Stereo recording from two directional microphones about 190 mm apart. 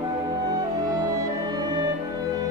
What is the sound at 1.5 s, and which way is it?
Music, 20° right (ahead or behind).